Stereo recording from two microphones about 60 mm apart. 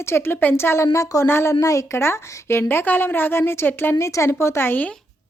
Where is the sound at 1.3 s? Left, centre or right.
Left.